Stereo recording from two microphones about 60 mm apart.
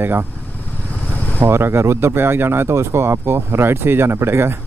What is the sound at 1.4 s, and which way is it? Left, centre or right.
Speech, right.